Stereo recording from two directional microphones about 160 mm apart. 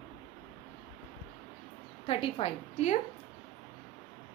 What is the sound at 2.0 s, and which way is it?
Speech, 35° left (ahead or behind).